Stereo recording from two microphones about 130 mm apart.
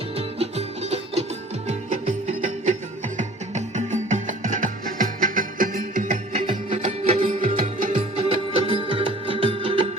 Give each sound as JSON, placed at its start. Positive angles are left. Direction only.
{"t": 0.2, "sound": "music", "side_deg": -55}
{"t": 1.6, "sound": "music", "side_deg": -70}
{"t": 6.4, "sound": "music", "side_deg": -45}
{"t": 7.3, "sound": "music", "side_deg": -85}
{"t": 8.3, "sound": "music", "side_deg": -45}